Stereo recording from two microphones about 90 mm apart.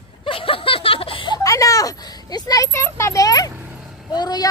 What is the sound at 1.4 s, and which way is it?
Speech, 40° left (ahead or behind).